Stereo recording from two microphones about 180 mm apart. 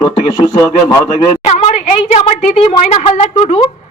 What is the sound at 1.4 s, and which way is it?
A woman's voice, 35° left (ahead or behind).